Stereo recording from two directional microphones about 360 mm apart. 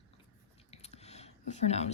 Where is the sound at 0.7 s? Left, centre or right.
Centre.